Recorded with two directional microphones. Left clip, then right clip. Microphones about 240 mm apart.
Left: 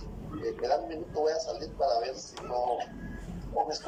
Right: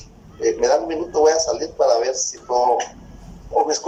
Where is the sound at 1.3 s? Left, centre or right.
Right.